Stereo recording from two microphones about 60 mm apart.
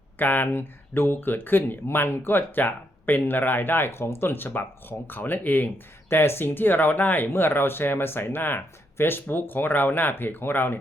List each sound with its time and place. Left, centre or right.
0.2 s speech: left